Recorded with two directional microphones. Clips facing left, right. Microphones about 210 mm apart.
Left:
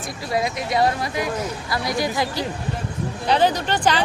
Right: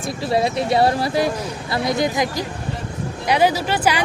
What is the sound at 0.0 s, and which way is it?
Speech, 25° right (ahead or behind).